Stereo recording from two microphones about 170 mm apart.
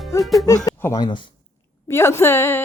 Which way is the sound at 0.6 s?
20° left (ahead or behind).